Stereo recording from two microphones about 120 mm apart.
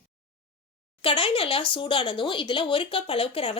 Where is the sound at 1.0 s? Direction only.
50° left (ahead or behind).